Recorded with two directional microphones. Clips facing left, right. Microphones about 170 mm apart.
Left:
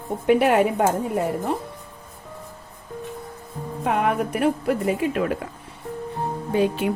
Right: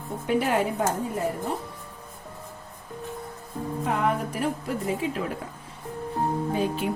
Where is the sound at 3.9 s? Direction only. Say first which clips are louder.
Left 5 dB; 65° left (ahead or behind).